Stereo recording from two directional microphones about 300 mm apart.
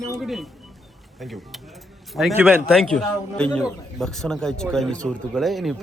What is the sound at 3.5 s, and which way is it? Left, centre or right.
Speech, centre.